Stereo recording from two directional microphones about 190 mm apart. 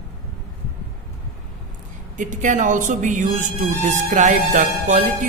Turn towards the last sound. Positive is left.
turn(degrees=-40)  # may be behind; listen again after turning